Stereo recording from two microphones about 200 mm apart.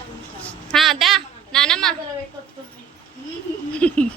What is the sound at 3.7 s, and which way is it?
Speech, 5° left (ahead or behind).